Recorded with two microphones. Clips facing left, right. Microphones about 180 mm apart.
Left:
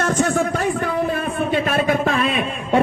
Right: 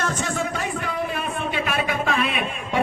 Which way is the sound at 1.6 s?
50° left (ahead or behind).